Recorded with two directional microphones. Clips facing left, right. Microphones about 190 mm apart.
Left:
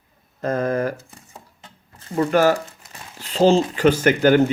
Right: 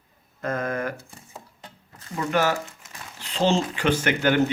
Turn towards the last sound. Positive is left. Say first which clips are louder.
# left 6 dB
turn(degrees=40)  # may be behind; listen again after turning